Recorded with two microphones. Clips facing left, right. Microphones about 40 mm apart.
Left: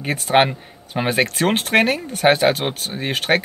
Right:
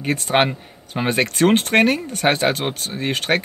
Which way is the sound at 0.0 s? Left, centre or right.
Centre.